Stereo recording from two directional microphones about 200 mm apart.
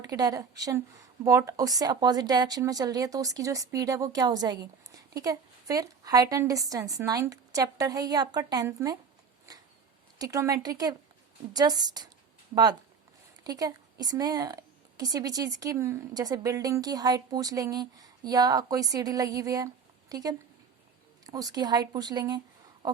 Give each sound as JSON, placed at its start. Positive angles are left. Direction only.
{"t": 0.1, "sound": "a woman's voice", "side_deg": -15}
{"t": 10.2, "sound": "speech", "side_deg": -15}
{"t": 13.4, "sound": "a woman's voice", "side_deg": -20}